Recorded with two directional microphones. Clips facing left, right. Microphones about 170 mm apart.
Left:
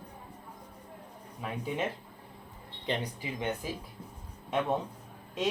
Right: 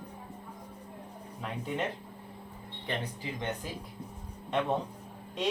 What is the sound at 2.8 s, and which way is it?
Speech, 15° left (ahead or behind).